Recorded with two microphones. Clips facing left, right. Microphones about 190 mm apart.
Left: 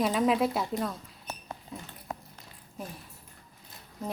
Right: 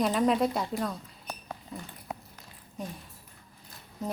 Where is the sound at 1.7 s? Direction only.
Centre (ahead or behind).